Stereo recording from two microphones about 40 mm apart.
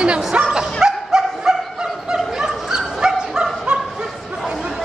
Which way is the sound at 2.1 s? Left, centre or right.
Centre.